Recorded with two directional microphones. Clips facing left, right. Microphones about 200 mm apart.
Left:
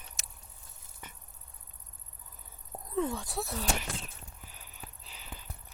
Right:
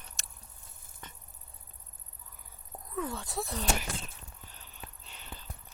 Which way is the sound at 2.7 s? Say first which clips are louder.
Left 5 dB; 30° left (ahead or behind).